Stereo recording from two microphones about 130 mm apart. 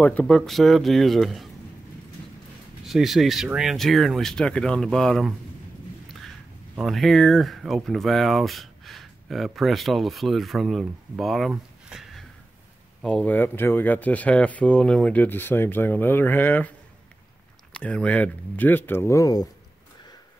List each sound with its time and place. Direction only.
0.0 s speech: 10° left (ahead or behind)
0.5 s speech: centre (ahead or behind)
2.8 s speech: centre (ahead or behind)
6.7 s speech: centre (ahead or behind); by 16.7 s 15° left (ahead or behind)
17.7 s speech: 10° left (ahead or behind); by 19.5 s 30° left (ahead or behind)